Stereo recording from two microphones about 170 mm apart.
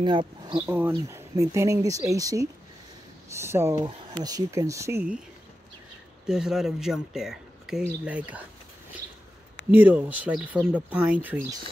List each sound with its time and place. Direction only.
0.0 s speech: 30° right (ahead or behind)
0.7 s speech: 10° right (ahead or behind)
6.2 s speech: 5° right (ahead or behind)
9.7 s speech: 10° right (ahead or behind)